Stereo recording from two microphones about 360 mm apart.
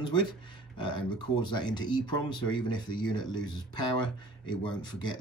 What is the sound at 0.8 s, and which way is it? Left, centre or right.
Speech, centre.